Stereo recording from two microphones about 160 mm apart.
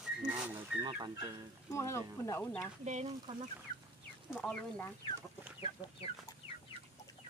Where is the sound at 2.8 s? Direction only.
45° right (ahead or behind).